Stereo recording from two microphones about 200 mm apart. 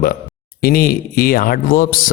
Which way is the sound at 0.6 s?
45° left (ahead or behind).